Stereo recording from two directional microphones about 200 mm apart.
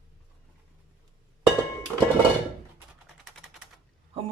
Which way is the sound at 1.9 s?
Centre (ahead or behind).